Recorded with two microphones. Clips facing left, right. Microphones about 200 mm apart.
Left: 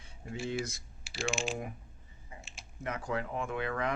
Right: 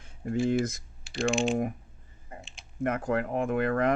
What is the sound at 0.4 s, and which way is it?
Speech, 50° right (ahead or behind).